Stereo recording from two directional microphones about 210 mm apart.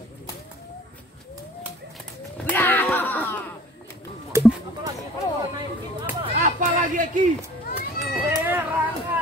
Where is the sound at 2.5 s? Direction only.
10° left (ahead or behind).